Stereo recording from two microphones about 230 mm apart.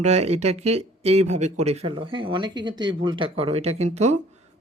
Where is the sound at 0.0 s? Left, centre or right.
Right.